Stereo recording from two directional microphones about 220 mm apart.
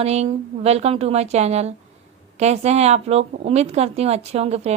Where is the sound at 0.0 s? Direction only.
30° right (ahead or behind).